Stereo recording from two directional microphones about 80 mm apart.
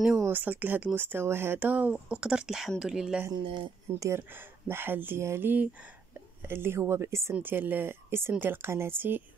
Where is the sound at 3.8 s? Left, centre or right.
Right.